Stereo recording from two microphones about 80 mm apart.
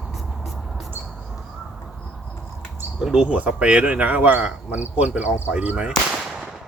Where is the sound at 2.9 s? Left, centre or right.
Centre.